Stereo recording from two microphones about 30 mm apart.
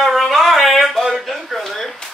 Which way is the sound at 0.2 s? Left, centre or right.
Centre.